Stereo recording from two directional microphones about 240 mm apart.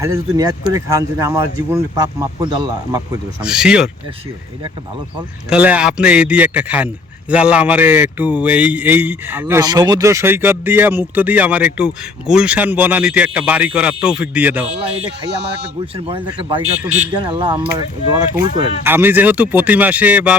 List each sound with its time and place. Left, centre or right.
0.0 s a man's voice: centre
2.4 s speech: centre
3.4 s speech: centre
5.5 s a man's voice: centre
14.7 s a man's voice: right; by 20.3 s centre